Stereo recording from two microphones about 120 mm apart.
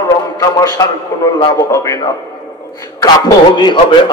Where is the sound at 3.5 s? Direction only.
40° left (ahead or behind).